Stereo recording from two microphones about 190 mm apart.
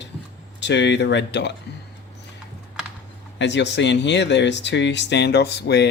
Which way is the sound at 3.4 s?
65° left (ahead or behind).